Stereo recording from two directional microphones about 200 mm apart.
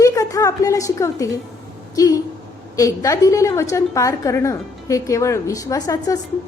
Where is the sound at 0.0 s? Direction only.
15° left (ahead or behind).